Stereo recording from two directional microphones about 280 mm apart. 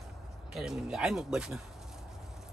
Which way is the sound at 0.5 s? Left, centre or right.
Centre.